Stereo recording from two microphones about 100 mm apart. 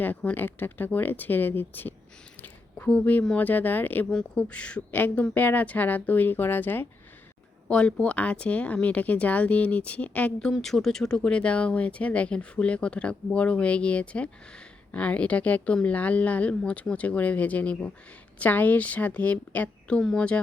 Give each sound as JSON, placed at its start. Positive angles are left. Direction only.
{"t": 0.0, "sound": "speech", "side_deg": 15}
{"t": 7.7, "sound": "speech", "side_deg": 10}
{"t": 10.5, "sound": "speech", "side_deg": 0}